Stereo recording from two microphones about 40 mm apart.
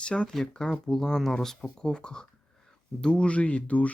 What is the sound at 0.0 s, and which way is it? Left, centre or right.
Speech, left.